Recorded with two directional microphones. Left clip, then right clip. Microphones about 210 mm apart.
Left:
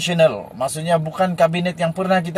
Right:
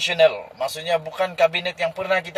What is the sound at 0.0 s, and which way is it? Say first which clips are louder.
Speech: left 1 dB; centre (ahead or behind).